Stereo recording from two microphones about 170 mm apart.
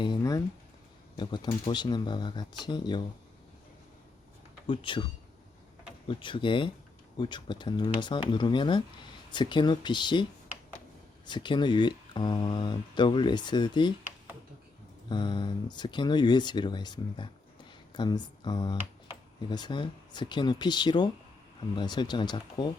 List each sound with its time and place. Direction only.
0.0 s a sound: 25° left (ahead or behind)
1.1 s speech: 25° left (ahead or behind)
4.6 s speech: 30° left (ahead or behind)
11.3 s speech: 25° left (ahead or behind)
15.1 s speech: 25° left (ahead or behind)